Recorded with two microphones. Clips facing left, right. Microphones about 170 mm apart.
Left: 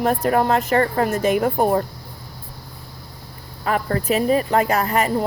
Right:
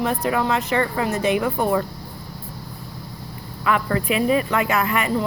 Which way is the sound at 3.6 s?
40° left (ahead or behind).